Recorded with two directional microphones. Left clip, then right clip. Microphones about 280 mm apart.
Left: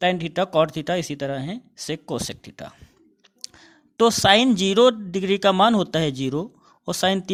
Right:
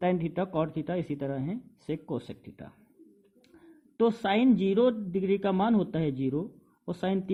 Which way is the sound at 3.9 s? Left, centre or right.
Left.